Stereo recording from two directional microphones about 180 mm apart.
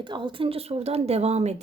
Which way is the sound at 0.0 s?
25° right (ahead or behind).